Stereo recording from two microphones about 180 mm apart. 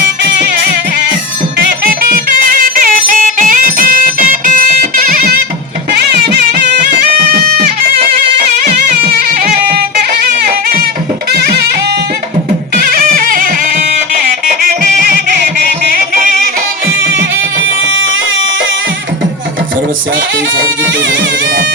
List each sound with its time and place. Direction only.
1.5 s music: 60° right (ahead or behind)
8.6 s music: 55° right (ahead or behind)
17.2 s music: 90° right